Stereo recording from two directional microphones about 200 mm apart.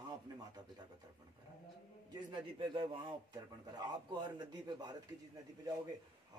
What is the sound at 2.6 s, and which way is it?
A man's voice, 25° right (ahead or behind).